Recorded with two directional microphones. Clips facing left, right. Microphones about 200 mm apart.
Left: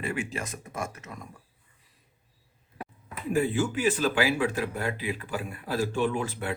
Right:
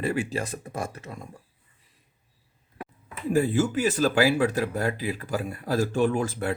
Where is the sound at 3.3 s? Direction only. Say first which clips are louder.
Right 3 dB; 40° right (ahead or behind).